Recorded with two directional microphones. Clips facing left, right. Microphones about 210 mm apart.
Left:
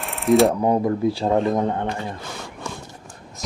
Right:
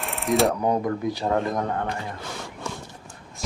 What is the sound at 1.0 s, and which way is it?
Speech, 25° left (ahead or behind).